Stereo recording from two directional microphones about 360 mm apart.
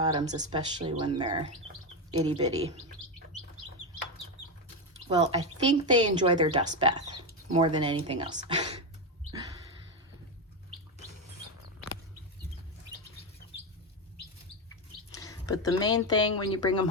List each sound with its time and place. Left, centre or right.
0.0 s speech: centre
5.0 s speech: centre
15.1 s speech: centre
16.1 s speech: left